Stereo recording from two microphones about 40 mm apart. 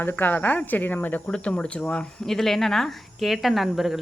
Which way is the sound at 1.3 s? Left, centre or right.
Left.